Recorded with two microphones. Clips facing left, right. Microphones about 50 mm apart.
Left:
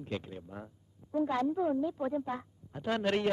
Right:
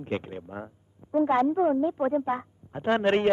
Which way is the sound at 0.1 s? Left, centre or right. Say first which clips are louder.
Right 8 dB; right.